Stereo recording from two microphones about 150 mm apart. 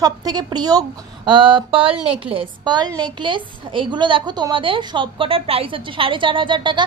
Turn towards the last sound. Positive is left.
turn(degrees=-30)  # may be behind; listen again after turning